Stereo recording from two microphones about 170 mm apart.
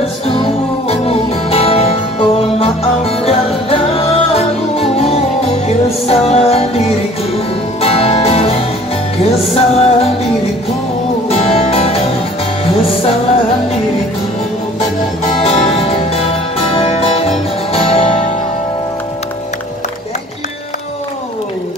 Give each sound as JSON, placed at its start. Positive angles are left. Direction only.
{"t": 0.0, "sound": "music", "side_deg": 35}
{"t": 7.8, "sound": "music", "side_deg": 35}
{"t": 11.2, "sound": "music", "side_deg": 35}
{"t": 15.4, "sound": "music", "side_deg": 35}